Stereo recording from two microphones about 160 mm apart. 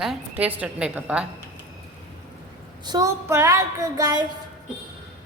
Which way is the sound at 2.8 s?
20° right (ahead or behind).